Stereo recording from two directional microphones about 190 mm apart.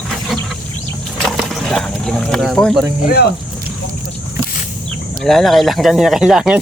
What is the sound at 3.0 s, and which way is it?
Speech, 55° left (ahead or behind).